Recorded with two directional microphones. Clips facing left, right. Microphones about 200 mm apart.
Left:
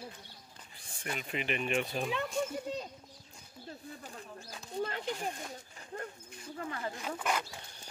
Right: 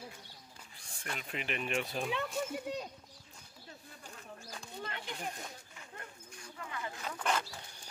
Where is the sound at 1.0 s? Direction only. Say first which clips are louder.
Left 4 dB; 5° left (ahead or behind).